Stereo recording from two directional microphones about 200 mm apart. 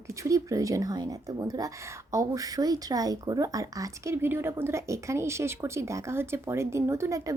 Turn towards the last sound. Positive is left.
turn(degrees=-15)  # may be behind; listen again after turning